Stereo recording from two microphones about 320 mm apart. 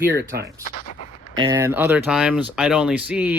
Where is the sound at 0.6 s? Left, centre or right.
Left.